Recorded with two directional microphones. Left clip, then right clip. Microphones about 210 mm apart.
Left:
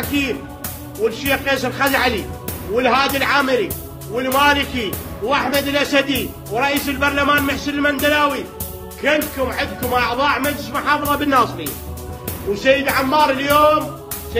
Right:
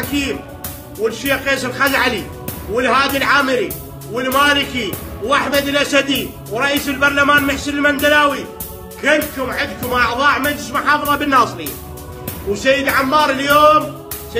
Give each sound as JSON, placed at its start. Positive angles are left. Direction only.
{"t": 0.1, "sound": "speech", "side_deg": -15}
{"t": 12.5, "sound": "speech", "side_deg": -15}